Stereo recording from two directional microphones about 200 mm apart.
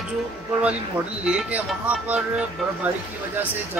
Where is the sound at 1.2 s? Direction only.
5° right (ahead or behind).